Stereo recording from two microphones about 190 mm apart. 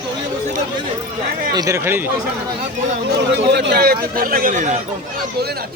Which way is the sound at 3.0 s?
60° right (ahead or behind).